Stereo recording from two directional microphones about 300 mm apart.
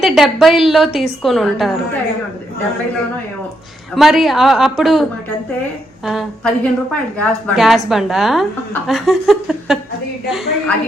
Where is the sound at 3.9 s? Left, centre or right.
Centre.